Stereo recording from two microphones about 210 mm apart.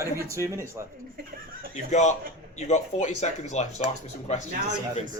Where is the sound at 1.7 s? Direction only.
35° left (ahead or behind).